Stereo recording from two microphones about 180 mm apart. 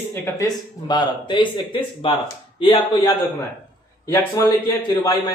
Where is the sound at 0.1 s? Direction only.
20° left (ahead or behind).